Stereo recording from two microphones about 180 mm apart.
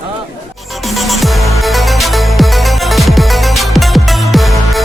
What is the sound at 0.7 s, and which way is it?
Music, centre (ahead or behind).